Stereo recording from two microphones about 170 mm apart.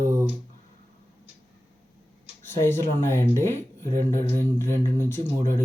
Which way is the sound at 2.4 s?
15° left (ahead or behind).